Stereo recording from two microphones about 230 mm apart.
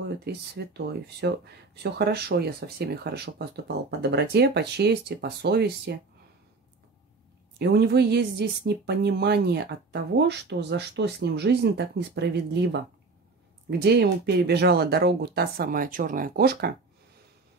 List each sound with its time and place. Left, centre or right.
0.2 s speech: right
7.5 s speech: right